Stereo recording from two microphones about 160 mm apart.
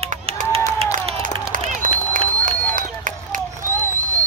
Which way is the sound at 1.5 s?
55° right (ahead or behind).